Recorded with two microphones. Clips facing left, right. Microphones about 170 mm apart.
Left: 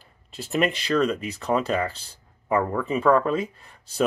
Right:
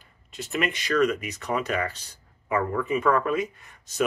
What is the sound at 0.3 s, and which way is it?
Speech, 35° left (ahead or behind).